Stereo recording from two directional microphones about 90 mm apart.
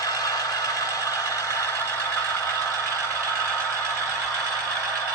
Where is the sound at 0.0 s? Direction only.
45° left (ahead or behind).